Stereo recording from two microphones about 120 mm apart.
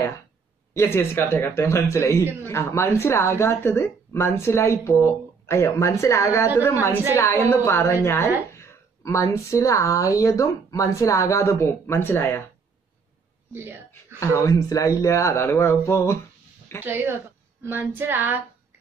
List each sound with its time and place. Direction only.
0.7 s speech: 20° left (ahead or behind)
13.5 s speech: 20° right (ahead or behind)
14.2 s speech: 25° left (ahead or behind)
16.8 s child singing: 15° right (ahead or behind)